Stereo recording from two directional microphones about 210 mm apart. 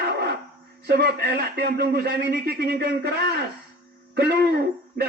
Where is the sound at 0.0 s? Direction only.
50° right (ahead or behind).